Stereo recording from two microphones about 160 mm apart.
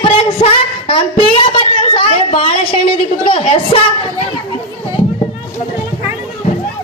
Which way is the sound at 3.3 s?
35° left (ahead or behind).